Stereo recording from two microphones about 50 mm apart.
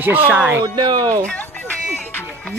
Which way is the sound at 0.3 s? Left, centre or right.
Right.